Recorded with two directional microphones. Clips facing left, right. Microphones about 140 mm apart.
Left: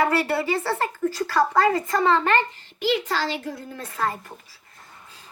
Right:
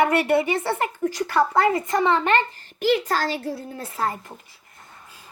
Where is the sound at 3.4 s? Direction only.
35° right (ahead or behind).